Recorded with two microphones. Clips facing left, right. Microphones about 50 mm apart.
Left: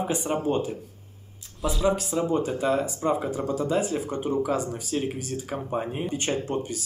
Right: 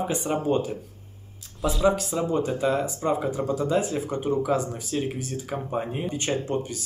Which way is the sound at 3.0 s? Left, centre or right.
Centre.